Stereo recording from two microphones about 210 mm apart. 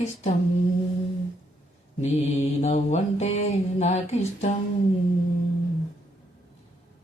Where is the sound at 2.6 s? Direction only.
30° left (ahead or behind).